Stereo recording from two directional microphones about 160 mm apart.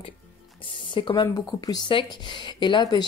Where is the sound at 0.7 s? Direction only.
30° left (ahead or behind).